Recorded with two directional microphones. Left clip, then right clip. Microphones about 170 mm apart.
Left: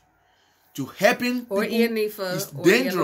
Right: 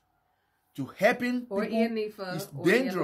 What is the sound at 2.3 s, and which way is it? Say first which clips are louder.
Speech: left 5 dB; 15° right (ahead or behind).